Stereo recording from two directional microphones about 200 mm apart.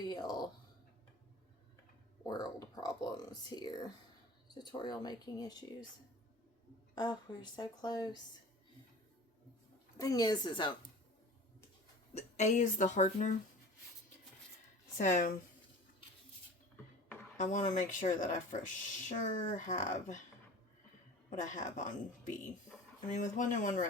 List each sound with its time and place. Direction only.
0.0 s a sound: 20° left (ahead or behind)
2.2 s speech: 20° left (ahead or behind)
6.9 s speech: 20° left (ahead or behind)
10.0 s speech: 20° left (ahead or behind)
12.1 s speech: 35° left (ahead or behind)
14.9 s speech: 40° left (ahead or behind)
17.3 s speech: 40° left (ahead or behind)
21.2 s speech: 40° left (ahead or behind)